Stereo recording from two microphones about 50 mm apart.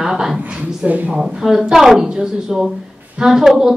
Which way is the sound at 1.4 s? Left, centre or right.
Centre.